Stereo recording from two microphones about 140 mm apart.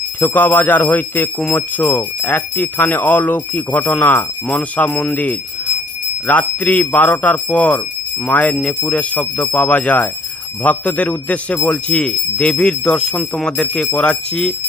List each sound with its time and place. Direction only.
0.2 s speech: 15° left (ahead or behind)